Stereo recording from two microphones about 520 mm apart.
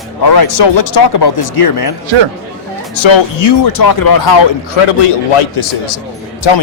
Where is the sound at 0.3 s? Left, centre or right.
Left.